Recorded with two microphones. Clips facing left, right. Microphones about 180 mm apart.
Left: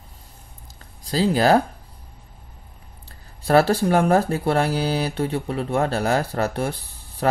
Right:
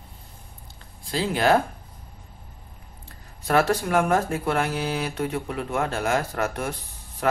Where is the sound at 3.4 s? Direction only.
30° left (ahead or behind).